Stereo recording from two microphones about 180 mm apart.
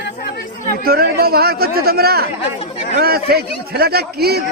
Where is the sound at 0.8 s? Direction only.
60° right (ahead or behind).